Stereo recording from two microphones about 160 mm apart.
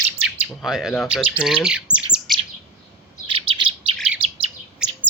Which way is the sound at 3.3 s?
35° right (ahead or behind).